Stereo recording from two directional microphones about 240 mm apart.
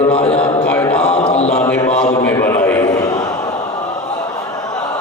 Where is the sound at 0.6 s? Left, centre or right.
Centre.